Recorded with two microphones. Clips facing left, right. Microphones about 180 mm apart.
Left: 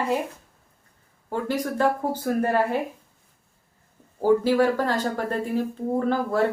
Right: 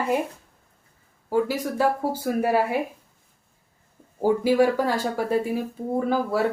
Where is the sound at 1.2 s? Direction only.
5° right (ahead or behind).